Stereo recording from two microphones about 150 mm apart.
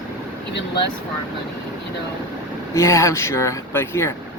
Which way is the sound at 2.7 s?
20° left (ahead or behind).